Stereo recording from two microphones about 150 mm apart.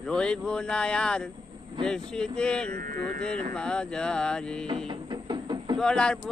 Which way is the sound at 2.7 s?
80° right.